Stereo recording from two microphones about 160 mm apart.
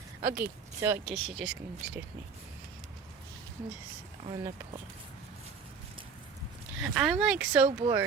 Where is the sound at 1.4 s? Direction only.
5° right (ahead or behind).